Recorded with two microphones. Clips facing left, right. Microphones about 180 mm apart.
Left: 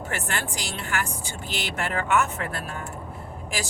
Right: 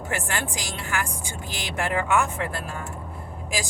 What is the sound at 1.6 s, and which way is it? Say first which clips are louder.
Speech: right 3 dB; 15° right (ahead or behind).